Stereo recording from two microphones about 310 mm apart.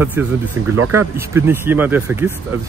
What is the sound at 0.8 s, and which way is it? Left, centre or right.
Speech, right.